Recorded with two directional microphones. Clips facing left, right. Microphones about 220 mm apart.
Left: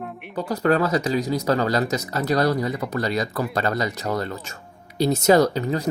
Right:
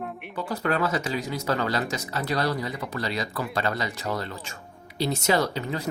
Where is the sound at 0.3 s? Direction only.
40° left (ahead or behind).